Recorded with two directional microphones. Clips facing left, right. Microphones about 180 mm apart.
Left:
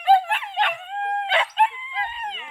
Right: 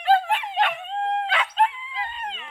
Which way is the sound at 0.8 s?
25° right (ahead or behind).